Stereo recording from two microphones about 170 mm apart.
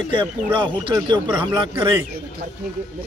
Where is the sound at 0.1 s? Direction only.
30° right (ahead or behind).